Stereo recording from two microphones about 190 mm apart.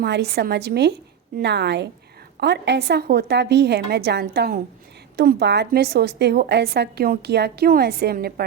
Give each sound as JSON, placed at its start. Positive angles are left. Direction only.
{"t": 0.0, "sound": "a woman's voice", "side_deg": -60}